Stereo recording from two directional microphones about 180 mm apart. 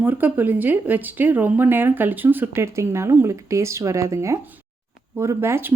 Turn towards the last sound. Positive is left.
turn(degrees=-15)  # may be behind; listen again after turning